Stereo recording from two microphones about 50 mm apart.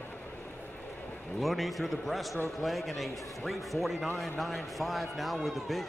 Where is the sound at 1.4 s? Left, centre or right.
Centre.